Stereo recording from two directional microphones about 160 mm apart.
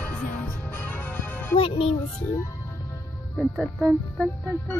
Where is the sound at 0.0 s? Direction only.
10° left (ahead or behind).